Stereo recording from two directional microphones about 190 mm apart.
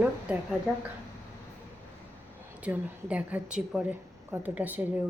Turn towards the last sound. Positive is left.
turn(degrees=-10)  # may be behind; listen again after turning